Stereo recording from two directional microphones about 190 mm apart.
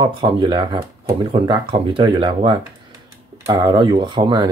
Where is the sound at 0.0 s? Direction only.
25° right (ahead or behind).